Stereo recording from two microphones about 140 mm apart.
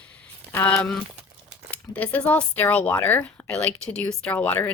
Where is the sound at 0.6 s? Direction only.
5° left (ahead or behind).